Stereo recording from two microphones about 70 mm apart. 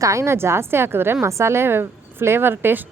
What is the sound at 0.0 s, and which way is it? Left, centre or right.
A woman's voice, right.